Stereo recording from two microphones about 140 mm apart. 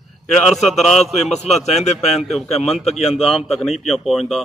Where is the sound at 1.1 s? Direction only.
50° left (ahead or behind).